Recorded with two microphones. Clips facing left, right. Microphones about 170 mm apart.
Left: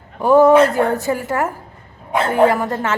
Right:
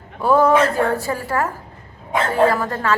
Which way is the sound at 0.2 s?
15° left (ahead or behind).